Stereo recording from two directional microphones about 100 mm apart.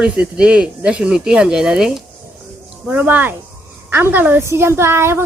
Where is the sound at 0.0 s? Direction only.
10° right (ahead or behind).